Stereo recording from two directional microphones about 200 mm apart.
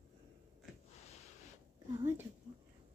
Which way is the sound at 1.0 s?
35° left (ahead or behind).